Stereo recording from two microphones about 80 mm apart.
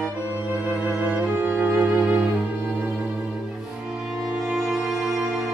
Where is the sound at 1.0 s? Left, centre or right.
Centre.